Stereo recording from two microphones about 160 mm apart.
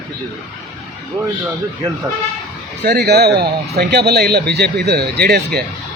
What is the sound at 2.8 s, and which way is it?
Speech, 90° right.